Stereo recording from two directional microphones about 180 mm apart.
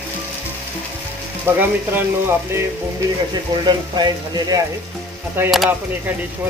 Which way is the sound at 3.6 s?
25° right (ahead or behind).